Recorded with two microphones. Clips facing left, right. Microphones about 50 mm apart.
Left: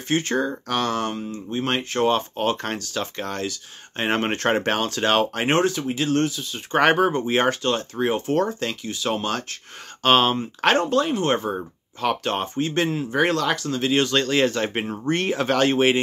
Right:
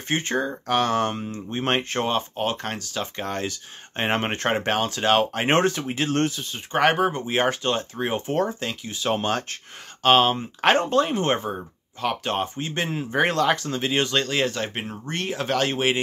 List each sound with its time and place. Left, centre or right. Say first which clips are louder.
0.1 s speech: left 2 dB; centre
2.0 s speech: left 3 dB; centre
3.3 s speech: even; right
5.5 s speech: right 1 dB; right
6.7 s speech: left 2 dB; centre
8.9 s speech: right 3 dB; right
10.0 s speech: even; centre
10.6 s speech: even; centre
12.0 s speech: left 2 dB; centre
14.7 s speech: left 7 dB; centre